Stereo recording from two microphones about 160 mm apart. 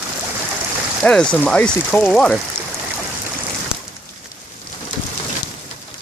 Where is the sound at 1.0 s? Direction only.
5° left (ahead or behind).